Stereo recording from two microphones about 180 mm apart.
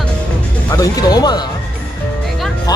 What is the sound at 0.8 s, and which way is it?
Speech, 20° left (ahead or behind).